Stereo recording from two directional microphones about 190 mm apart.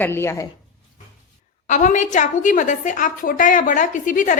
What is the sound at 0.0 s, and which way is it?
Speech, 10° left (ahead or behind).